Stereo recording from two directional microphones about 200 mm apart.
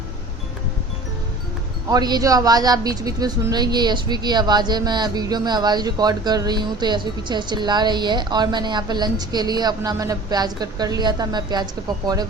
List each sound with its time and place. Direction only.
1.9 s a woman's voice: 20° right (ahead or behind)